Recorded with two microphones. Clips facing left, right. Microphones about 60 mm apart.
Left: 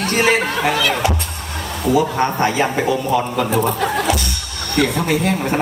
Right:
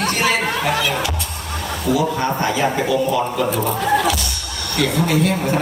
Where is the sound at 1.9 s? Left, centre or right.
Left.